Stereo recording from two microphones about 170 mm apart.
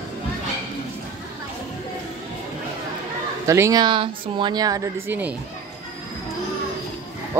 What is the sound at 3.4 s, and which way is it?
Speech, 15° right (ahead or behind).